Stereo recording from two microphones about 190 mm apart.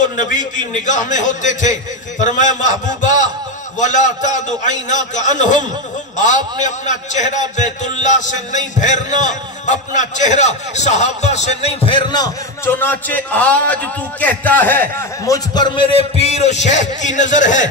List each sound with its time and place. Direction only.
0.2 s a man's voice: 40° left (ahead or behind)
2.9 s a sound: 40° left (ahead or behind)
3.8 s a man's voice: 40° left (ahead or behind)